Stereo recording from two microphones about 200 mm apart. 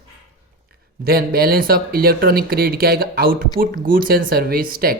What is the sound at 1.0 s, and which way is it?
Speech, 50° right (ahead or behind).